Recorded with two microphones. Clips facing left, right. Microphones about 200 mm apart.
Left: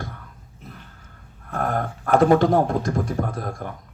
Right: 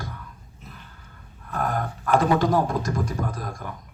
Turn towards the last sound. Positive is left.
turn(degrees=55)  # may be behind; listen again after turning